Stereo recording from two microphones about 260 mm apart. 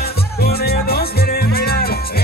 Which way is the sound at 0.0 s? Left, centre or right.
Left.